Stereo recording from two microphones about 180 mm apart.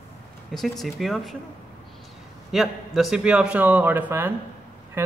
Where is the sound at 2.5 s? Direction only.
Centre (ahead or behind).